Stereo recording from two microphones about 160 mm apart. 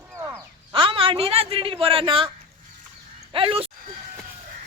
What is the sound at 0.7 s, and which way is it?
A man's voice, 35° right (ahead or behind).